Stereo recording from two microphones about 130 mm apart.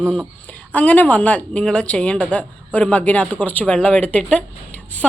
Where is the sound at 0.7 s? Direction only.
10° left (ahead or behind).